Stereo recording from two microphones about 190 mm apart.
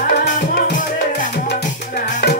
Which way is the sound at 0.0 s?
50° left (ahead or behind).